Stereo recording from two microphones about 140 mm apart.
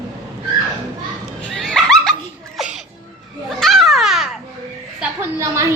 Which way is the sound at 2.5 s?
5° right (ahead or behind).